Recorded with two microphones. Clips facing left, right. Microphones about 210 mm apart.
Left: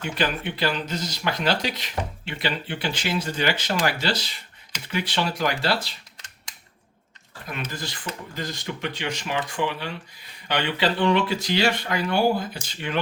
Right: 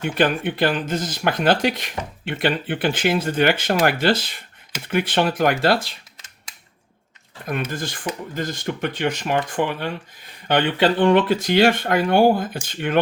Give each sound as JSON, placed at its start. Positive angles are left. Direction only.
{"t": 0.0, "sound": "speech", "side_deg": -50}
{"t": 7.7, "sound": "speech", "side_deg": -50}